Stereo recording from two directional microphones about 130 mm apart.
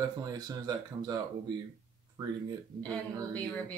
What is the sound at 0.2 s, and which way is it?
Speech, 30° right (ahead or behind).